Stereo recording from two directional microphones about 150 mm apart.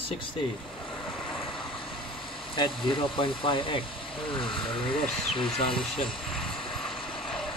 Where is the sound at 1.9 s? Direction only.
35° left (ahead or behind).